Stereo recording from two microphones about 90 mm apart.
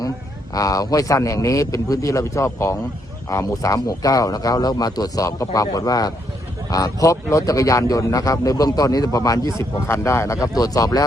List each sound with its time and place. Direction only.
0.5 s a man's voice: 40° left (ahead or behind)